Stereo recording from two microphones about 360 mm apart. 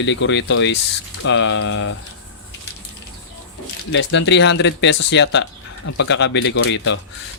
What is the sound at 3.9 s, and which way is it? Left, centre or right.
Speech, left.